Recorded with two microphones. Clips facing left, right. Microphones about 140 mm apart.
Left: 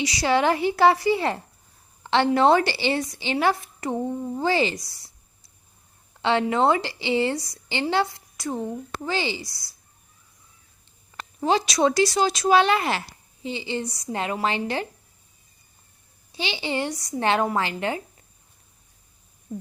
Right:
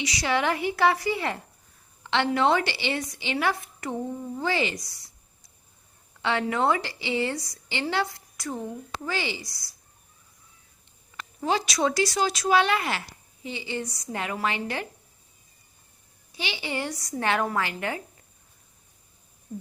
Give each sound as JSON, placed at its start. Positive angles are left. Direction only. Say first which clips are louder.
{"t": 0.0, "sound": "a woman's voice", "louder": "left 5 dB", "side_deg": 35}
{"t": 6.2, "sound": "a woman's voice", "louder": "left 4 dB", "side_deg": 30}
{"t": 11.4, "sound": "a woman's voice", "louder": "left 4 dB", "side_deg": 25}
{"t": 16.3, "sound": "a woman's voice", "louder": "left 4 dB", "side_deg": 30}